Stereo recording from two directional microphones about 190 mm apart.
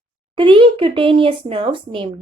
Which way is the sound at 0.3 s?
25° right (ahead or behind).